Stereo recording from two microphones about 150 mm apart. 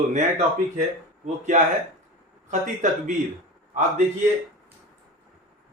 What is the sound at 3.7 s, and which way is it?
Speech, 50° right (ahead or behind).